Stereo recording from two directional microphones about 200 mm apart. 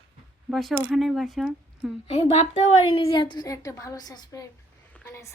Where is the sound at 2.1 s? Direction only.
30° left (ahead or behind).